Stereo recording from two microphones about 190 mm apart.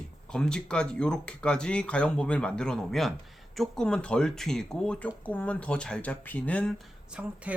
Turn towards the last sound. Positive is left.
turn(degrees=-5)  # may be behind; listen again after turning